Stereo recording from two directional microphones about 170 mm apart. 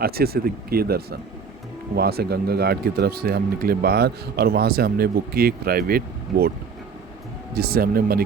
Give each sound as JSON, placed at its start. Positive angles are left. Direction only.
{"t": 0.0, "sound": "speech", "side_deg": -65}
{"t": 7.5, "sound": "speech", "side_deg": -65}